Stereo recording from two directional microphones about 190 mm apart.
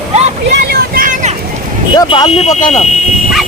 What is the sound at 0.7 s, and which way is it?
Vehicle, 50° right (ahead or behind).